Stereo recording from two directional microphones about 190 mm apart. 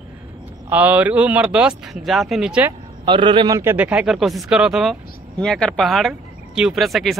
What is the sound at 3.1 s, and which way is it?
Speech, 25° right (ahead or behind).